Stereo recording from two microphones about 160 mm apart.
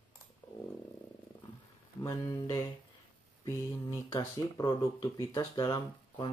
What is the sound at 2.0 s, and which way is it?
Speech, 20° left (ahead or behind).